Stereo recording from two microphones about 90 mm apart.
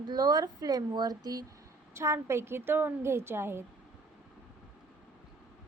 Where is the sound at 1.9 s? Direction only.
30° right (ahead or behind).